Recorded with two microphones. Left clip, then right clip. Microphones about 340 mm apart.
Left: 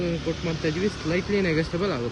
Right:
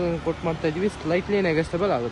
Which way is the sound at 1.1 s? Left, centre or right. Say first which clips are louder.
Right 3 dB; centre.